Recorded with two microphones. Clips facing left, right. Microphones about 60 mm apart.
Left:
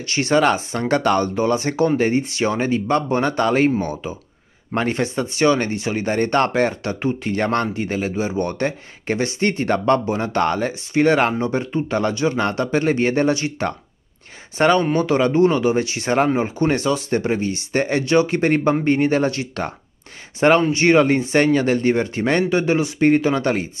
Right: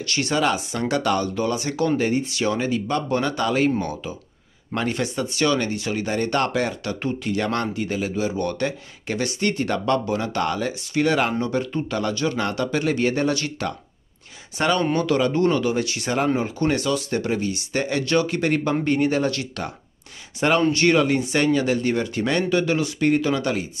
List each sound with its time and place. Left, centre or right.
0.0 s speech: left
0.3 s speech: left
3.8 s speech: left
11.4 s speech: left
13.3 s speech: left
14.6 s speech: left